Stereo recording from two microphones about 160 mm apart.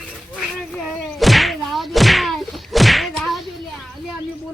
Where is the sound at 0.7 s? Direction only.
Centre (ahead or behind).